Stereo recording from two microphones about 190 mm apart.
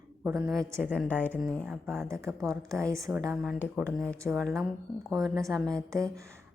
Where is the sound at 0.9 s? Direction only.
10° left (ahead or behind).